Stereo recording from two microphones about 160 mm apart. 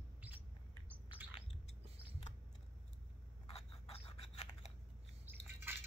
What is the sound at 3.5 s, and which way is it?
Scissors, 35° left (ahead or behind).